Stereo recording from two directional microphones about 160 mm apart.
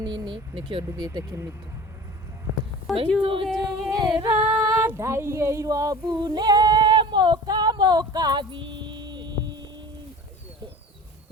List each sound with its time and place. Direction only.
0.0 s speech: 30° right (ahead or behind)
3.2 s speech: 35° right (ahead or behind)
3.4 s singing: centre (ahead or behind)
3.8 s singing: 25° right (ahead or behind)
4.3 s female singing: 10° right (ahead or behind); by 9.6 s 30° right (ahead or behind)